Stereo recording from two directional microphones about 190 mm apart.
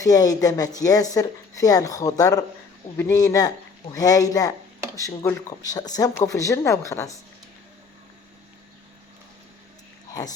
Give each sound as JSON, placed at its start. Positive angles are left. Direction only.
{"t": 0.0, "sound": "speech", "side_deg": 20}
{"t": 10.2, "sound": "speech", "side_deg": 20}